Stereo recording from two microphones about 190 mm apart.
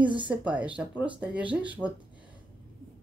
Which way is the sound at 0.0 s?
25° right (ahead or behind).